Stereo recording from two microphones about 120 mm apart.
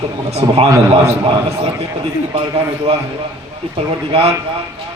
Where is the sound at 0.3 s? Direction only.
60° right (ahead or behind).